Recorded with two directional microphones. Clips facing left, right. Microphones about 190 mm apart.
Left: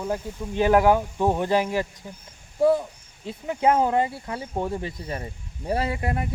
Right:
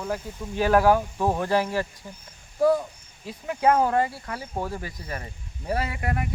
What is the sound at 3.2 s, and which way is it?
Speech, 20° left (ahead or behind).